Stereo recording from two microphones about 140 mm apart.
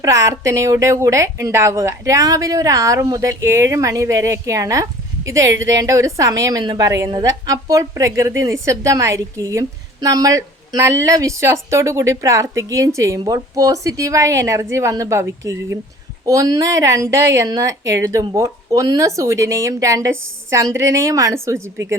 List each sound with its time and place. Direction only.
0.0 s a woman's voice: 25° right (ahead or behind)